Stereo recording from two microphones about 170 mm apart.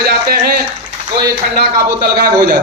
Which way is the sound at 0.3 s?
65° right (ahead or behind).